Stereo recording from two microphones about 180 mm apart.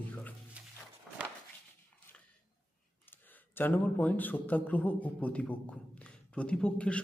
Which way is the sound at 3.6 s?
10° left (ahead or behind).